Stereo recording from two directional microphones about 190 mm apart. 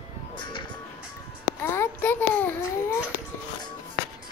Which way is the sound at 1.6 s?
10° left (ahead or behind).